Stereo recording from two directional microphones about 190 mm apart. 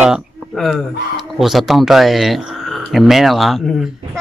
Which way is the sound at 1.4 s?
Centre (ahead or behind).